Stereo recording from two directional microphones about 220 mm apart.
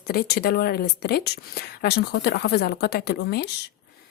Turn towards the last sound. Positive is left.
turn(degrees=50)  # may be behind; listen again after turning